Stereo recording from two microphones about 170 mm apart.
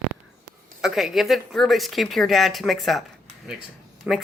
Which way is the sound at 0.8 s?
Centre (ahead or behind).